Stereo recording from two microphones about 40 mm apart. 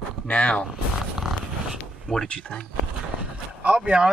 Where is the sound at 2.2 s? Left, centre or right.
Left.